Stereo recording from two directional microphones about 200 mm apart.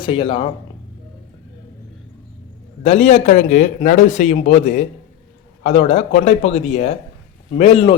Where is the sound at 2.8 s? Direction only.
35° left (ahead or behind).